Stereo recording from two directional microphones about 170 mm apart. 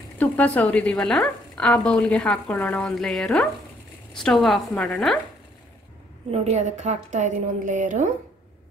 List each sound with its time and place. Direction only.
0.2 s speech: 10° left (ahead or behind)
6.3 s a woman's voice: 45° right (ahead or behind)